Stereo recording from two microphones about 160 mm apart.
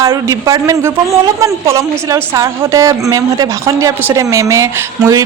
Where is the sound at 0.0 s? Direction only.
20° right (ahead or behind).